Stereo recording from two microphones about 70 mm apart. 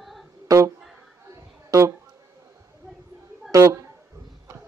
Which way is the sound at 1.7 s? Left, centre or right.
Right.